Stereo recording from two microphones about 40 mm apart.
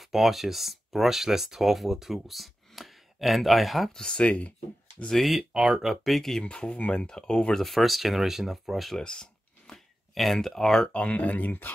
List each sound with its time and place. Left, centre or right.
0.0 s speech: centre
3.9 s speech: centre
4.2 s speech: left
5.1 s speech: centre
5.4 s speech: centre
6.0 s speech: centre
6.4 s speech: left
7.5 s speech: centre
9.0 s a sound: centre
10.1 s speech: centre
10.9 s speech: left